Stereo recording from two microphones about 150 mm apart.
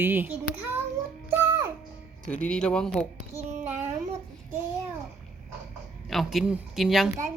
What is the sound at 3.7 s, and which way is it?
Child singing, 50° right (ahead or behind).